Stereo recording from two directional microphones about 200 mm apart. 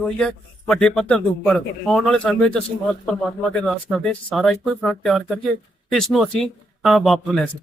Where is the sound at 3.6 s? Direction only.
5° left (ahead or behind).